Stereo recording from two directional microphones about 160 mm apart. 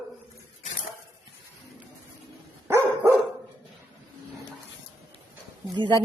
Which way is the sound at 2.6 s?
15° right (ahead or behind).